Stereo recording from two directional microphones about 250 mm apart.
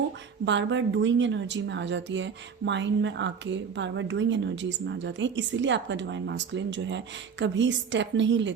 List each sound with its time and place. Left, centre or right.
0.4 s a woman's voice: right